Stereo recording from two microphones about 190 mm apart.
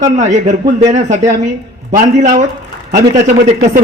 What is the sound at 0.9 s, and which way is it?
A man's voice, 35° right (ahead or behind).